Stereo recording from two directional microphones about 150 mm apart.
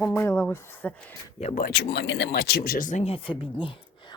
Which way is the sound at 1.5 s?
80° left.